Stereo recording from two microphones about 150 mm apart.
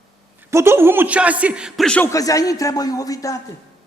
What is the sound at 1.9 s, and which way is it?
Speech, 10° left (ahead or behind).